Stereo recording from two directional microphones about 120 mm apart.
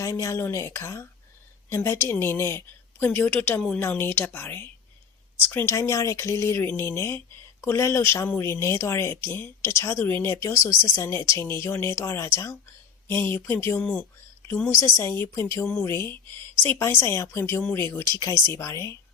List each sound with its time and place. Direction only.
0.0 s a woman's voice: 25° left (ahead or behind)